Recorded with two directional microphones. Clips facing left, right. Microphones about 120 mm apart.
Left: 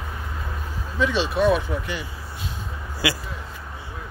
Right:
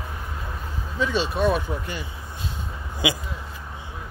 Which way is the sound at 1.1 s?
40° right (ahead or behind).